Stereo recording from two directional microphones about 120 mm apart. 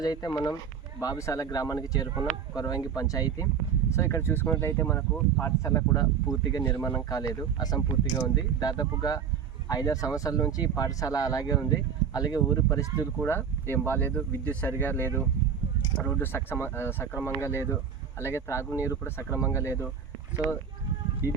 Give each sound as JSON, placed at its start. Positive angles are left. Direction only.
{"t": 0.0, "sound": "speech", "side_deg": 30}
{"t": 13.2, "sound": "speech", "side_deg": 20}